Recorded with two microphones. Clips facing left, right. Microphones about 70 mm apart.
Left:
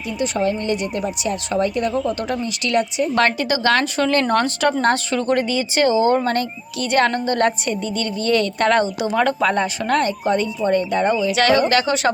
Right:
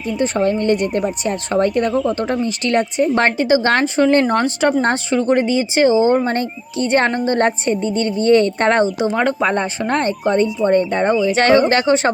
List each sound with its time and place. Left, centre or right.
0.2 s a woman's voice: right
1.9 s a woman's voice: right
4.1 s speech: centre